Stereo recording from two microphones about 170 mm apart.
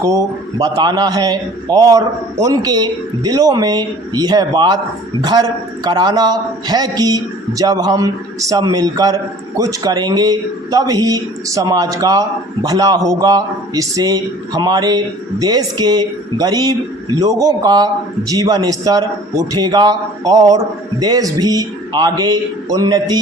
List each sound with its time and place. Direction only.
0.0 s a man's voice: 20° right (ahead or behind)